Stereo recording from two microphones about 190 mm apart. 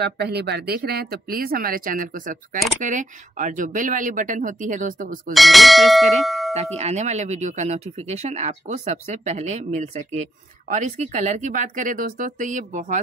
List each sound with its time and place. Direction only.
0.0 s speech: 60° right (ahead or behind)
5.3 s speech: centre (ahead or behind)
6.8 s speech: 35° right (ahead or behind)